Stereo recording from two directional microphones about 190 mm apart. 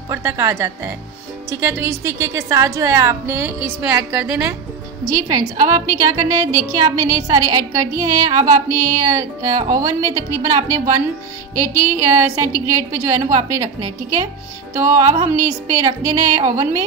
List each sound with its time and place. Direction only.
0.1 s a woman's voice: 15° right (ahead or behind)